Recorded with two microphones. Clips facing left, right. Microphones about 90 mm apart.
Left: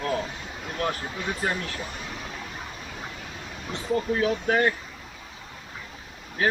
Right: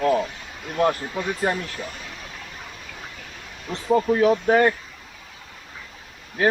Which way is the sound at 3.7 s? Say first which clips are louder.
Right 6 dB; 30° right (ahead or behind).